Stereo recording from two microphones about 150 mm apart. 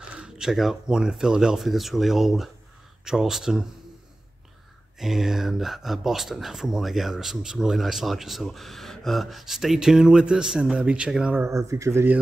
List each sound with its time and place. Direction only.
0.1 s speech: 5° right (ahead or behind)
4.9 s speech: centre (ahead or behind)
11.4 s speech: 20° right (ahead or behind)